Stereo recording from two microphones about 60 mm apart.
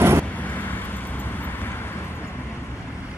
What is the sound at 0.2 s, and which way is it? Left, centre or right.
Vehicle, left.